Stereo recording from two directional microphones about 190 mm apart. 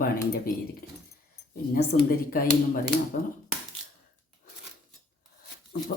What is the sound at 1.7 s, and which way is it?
Speech, 50° left (ahead or behind).